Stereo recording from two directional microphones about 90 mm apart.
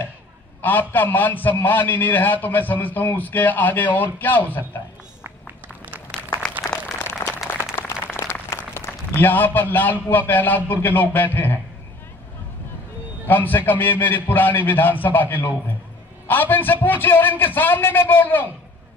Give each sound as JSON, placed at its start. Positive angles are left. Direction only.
{"t": 0.6, "sound": "a man's voice", "side_deg": 20}
{"t": 6.6, "sound": "a sound", "side_deg": 5}
{"t": 7.0, "sound": "applause", "side_deg": 30}
{"t": 13.3, "sound": "a man's voice", "side_deg": 20}